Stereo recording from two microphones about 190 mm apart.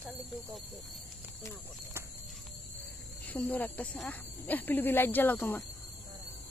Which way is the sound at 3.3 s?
10° left (ahead or behind).